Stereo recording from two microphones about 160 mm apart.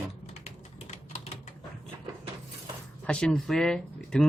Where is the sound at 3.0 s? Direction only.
5° left (ahead or behind).